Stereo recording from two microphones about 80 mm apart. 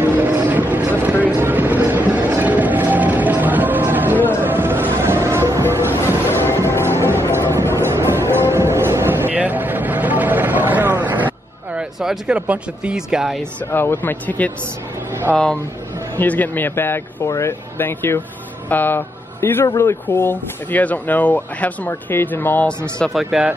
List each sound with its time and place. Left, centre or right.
0.0 s vehicle: right
4.4 s music: right
5.9 s music: left
7.8 s music: right
12.0 s speech: centre
13.7 s speech: left
23.0 s speech: centre